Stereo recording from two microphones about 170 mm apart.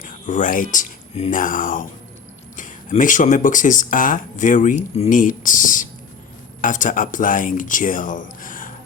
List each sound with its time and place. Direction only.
0.0 s speech: 50° left (ahead or behind)